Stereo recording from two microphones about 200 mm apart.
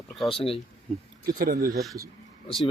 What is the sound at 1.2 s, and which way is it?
Speech, 45° right (ahead or behind).